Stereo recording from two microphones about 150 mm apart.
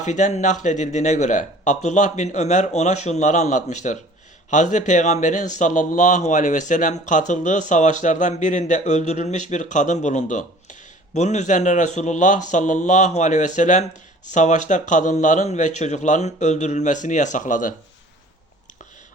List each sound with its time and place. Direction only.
0.0 s speech: 55° left (ahead or behind)